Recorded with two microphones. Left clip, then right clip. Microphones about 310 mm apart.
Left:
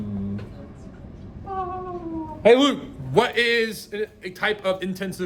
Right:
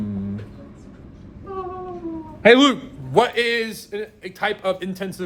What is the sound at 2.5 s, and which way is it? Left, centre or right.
Speech, right.